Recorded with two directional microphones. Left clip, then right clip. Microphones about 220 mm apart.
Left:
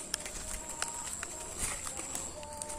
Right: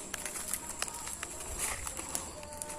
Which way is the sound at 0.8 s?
10° right (ahead or behind).